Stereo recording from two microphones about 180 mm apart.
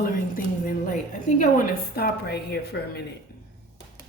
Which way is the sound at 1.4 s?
55° left (ahead or behind).